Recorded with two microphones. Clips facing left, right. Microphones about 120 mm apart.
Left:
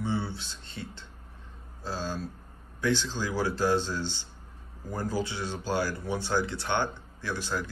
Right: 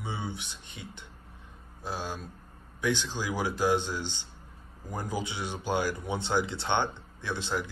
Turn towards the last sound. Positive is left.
turn(degrees=-20)  # may be behind; listen again after turning